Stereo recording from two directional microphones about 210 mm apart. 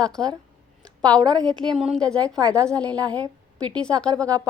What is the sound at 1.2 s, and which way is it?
Speech, 20° right (ahead or behind).